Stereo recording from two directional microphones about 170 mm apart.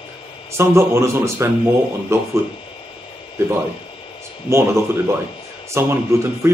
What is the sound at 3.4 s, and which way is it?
Speech, 15° right (ahead or behind).